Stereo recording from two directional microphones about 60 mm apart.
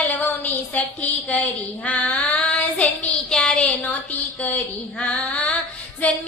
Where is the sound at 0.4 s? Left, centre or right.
Left.